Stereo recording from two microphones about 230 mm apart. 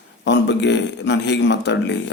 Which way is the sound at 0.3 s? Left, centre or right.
Left.